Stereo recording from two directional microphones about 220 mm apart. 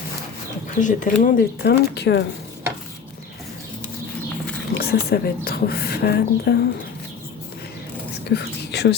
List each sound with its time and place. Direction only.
0.8 s speech: 35° left (ahead or behind)
4.7 s speech: 45° left (ahead or behind)
8.2 s whispering: 50° left (ahead or behind)